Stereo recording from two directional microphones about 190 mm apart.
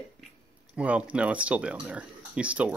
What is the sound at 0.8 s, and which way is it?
Speech, 5° right (ahead or behind).